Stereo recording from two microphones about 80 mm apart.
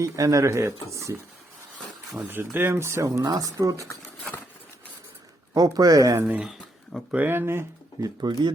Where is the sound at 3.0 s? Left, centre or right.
Right.